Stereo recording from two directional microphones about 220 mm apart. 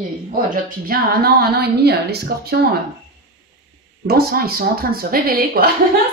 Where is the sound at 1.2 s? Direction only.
45° right (ahead or behind).